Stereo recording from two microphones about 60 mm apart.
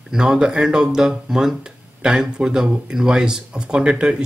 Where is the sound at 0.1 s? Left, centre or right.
Centre.